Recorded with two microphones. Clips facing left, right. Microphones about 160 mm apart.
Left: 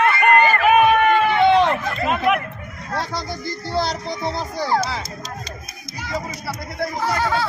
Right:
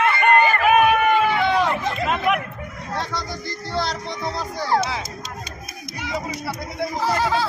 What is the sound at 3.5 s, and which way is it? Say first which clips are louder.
Music: left 3 dB; centre (ahead or behind).